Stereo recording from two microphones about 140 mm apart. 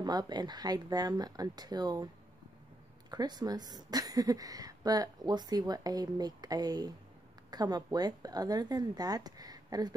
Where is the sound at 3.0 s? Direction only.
30° right (ahead or behind).